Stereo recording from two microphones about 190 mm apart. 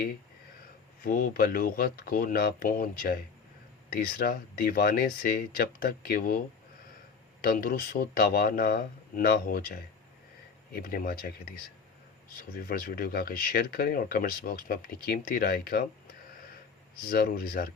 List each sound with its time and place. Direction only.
1.0 s speech: 50° left (ahead or behind)
7.4 s speech: 50° left (ahead or behind)
17.1 s speech: 55° left (ahead or behind)